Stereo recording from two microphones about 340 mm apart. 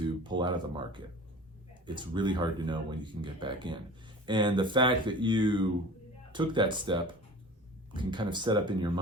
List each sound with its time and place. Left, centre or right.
0.0 s speech: centre